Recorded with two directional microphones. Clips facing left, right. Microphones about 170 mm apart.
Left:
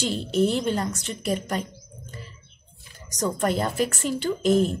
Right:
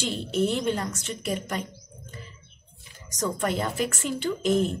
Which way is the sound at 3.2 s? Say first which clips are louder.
Left 3 dB; 35° left (ahead or behind).